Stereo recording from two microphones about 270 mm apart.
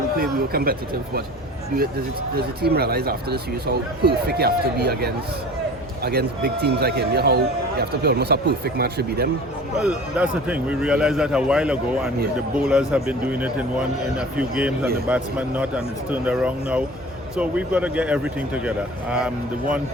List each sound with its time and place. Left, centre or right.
0.2 s a man's voice: right
2.3 s a man's voice: right
9.7 s a man's voice: centre